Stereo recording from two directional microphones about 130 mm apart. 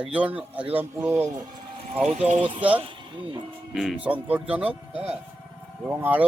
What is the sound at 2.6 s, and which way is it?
Speech, 10° right (ahead or behind).